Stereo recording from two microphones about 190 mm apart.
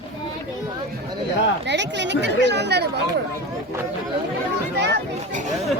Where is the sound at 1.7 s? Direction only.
65° right (ahead or behind).